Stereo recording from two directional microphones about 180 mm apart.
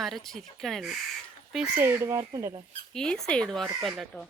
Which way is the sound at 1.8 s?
15° right (ahead or behind).